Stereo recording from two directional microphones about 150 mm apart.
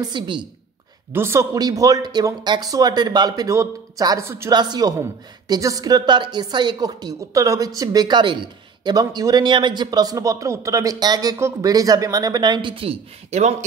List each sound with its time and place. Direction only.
0.0 s a woman's voice: 30° right (ahead or behind)
1.1 s a woman's voice: 15° right (ahead or behind)
4.6 s a woman's voice: 25° right (ahead or behind); by 13.7 s 50° right (ahead or behind)